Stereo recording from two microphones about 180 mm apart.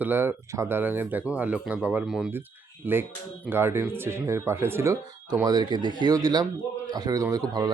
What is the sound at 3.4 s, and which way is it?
A man's voice, 10° right (ahead or behind).